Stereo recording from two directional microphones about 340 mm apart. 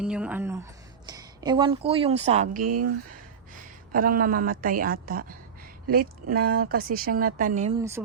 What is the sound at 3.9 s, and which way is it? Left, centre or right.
Speech, right.